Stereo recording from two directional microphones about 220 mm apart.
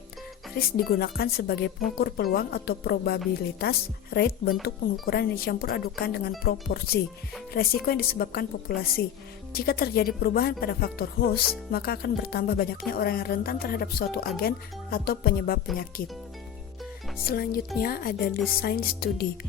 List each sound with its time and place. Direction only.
0.5 s speech: 45° left (ahead or behind)
17.2 s speech: 45° left (ahead or behind)